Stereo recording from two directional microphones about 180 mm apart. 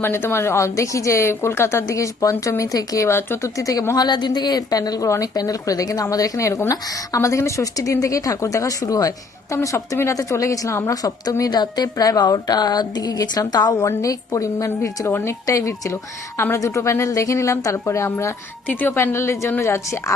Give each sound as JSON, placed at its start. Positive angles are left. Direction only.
{"t": 0.0, "sound": "a woman's voice", "side_deg": 15}